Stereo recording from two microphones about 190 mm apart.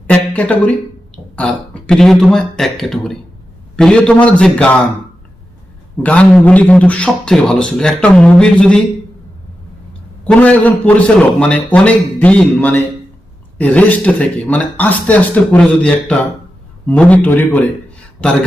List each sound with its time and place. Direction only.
0.1 s a sound: 5° left (ahead or behind)
1.1 s a man's voice: 5° left (ahead or behind)
6.0 s a man's voice: 5° left (ahead or behind)
10.2 s a man's voice: 5° left (ahead or behind)